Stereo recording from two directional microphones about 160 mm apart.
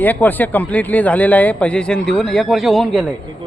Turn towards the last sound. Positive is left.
turn(degrees=0)  # may be behind; listen again after turning